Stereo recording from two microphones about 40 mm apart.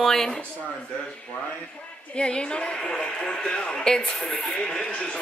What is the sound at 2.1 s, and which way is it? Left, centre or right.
A woman's voice, left.